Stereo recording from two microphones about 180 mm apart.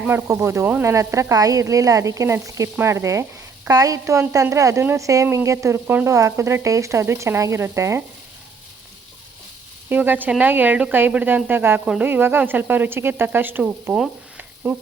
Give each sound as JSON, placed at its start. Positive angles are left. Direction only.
{"t": 0.0, "sound": "speech", "side_deg": -15}
{"t": 9.9, "sound": "speech", "side_deg": -10}